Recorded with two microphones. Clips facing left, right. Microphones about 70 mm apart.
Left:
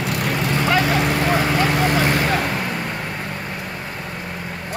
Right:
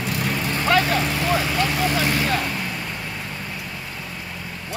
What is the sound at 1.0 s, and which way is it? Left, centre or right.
Vehicle, left.